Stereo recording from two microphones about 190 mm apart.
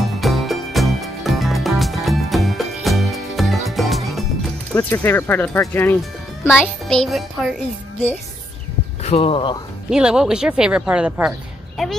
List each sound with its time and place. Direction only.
0.2 s music: centre (ahead or behind)
4.7 s speech: 10° left (ahead or behind)
6.4 s speech: 5° right (ahead or behind)
9.0 s speech: 30° left (ahead or behind)
9.8 s speech: 5° right (ahead or behind)